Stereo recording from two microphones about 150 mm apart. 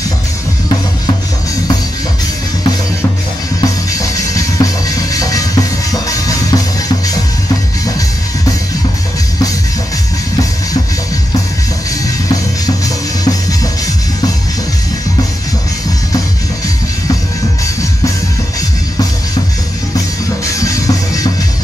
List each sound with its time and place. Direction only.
3.6 s music: 20° left (ahead or behind)
12.6 s music: 25° left (ahead or behind)
20.5 s music: 20° left (ahead or behind)